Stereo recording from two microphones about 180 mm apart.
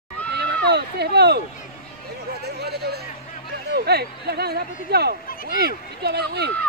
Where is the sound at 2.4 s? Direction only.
65° right (ahead or behind).